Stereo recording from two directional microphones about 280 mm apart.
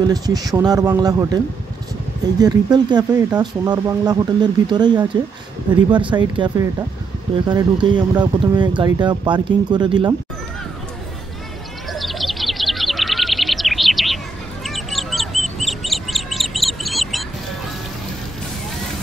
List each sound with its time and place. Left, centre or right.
0.0 s speech: centre
11.9 s bird: centre